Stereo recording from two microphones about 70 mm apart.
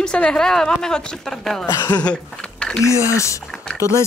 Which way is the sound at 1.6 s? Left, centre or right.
Left.